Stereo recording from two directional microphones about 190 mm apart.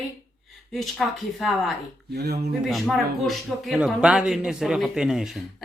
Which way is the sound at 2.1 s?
60° right (ahead or behind).